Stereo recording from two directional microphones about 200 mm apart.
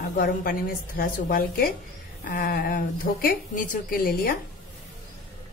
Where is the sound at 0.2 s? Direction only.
45° left (ahead or behind).